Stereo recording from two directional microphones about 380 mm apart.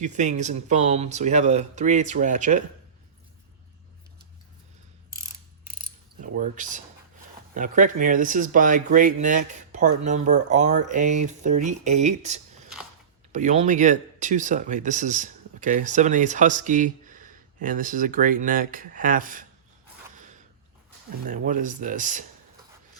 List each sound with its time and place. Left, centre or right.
0.0 s speech: centre
6.2 s speech: centre
21.2 s speech: centre